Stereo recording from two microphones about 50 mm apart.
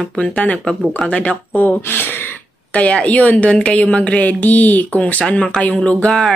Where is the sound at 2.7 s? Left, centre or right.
Left.